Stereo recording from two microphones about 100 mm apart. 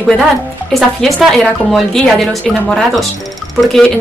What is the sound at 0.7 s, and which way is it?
A woman's voice, centre (ahead or behind).